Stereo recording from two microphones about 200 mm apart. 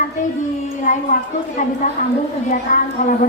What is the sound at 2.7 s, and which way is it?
Speech, 45° left (ahead or behind).